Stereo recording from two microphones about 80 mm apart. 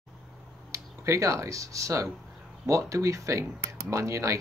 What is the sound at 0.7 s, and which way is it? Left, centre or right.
Speech, right.